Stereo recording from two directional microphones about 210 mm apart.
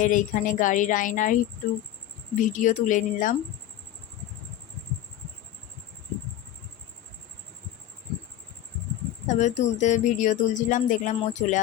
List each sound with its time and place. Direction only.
0.0 s speech: 40° left (ahead or behind)
2.4 s speech: 35° left (ahead or behind)
9.2 s speech: 35° left (ahead or behind)